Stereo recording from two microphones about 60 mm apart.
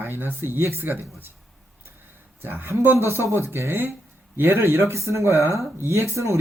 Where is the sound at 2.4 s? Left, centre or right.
Right.